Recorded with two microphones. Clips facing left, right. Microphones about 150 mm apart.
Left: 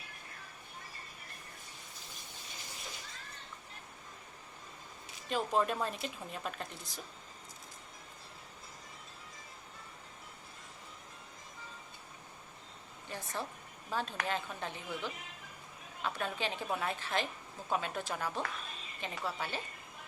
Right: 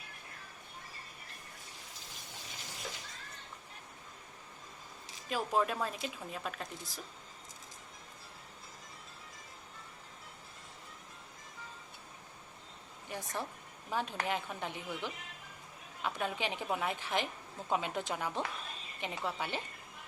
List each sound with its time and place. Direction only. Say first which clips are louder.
5.3 s a woman's voice: left 1 dB; 5° right (ahead or behind)
13.1 s a sound: right 1 dB; 15° right (ahead or behind)
13.9 s a woman's voice: right 1 dB; 15° right (ahead or behind)